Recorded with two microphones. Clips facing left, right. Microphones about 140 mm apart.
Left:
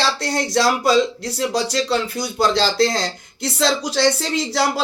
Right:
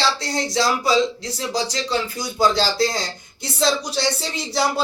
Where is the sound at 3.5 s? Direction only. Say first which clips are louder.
Left 1 dB; 90° left.